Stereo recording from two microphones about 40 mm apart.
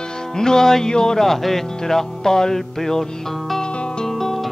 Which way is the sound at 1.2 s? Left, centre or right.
Centre.